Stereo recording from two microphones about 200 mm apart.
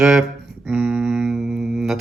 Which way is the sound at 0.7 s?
5° right (ahead or behind).